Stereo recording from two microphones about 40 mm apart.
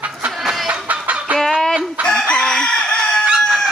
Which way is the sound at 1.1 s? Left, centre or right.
Right.